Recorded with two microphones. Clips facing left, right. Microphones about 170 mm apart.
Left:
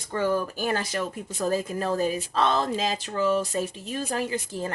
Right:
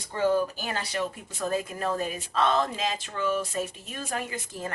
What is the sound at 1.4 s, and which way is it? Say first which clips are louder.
Speech: left 3 dB; 35° left (ahead or behind).